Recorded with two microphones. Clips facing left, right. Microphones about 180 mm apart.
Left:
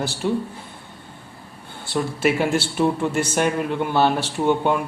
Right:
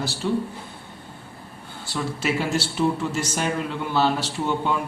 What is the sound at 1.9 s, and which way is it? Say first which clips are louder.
Speech: left 5 dB; 55° left (ahead or behind).